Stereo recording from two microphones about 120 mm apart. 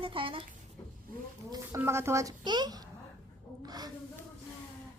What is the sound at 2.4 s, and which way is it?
Speech, 35° right (ahead or behind).